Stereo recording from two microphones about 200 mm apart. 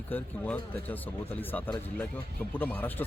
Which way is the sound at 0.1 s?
10° left (ahead or behind).